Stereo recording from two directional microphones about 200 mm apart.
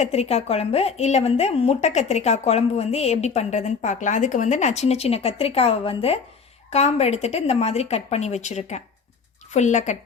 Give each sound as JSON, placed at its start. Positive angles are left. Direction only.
{"t": 0.0, "sound": "a woman's voice", "side_deg": 30}